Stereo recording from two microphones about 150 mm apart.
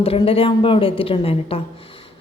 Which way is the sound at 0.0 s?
40° left (ahead or behind).